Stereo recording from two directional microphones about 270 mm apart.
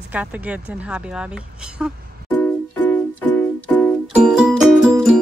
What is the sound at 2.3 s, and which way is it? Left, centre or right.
Music, centre.